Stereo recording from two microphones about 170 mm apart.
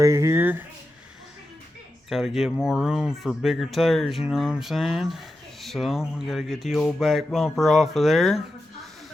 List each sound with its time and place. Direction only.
0.0 s speech: 20° right (ahead or behind)
2.0 s speech: centre (ahead or behind)